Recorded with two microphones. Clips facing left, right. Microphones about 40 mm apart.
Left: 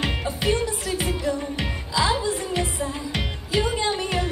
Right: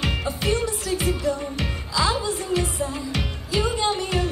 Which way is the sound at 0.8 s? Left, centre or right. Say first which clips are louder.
Right 1 dB; left.